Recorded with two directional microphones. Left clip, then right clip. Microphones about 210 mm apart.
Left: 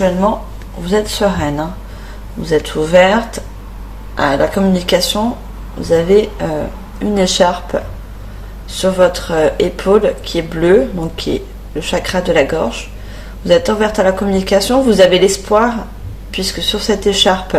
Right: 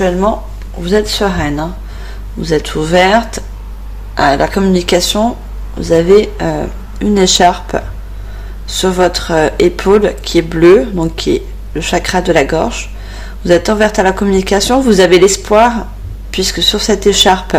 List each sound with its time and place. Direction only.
0.9 s speech: 40° right (ahead or behind)
4.2 s speech: 45° right (ahead or behind)
8.8 s speech: 45° right (ahead or behind)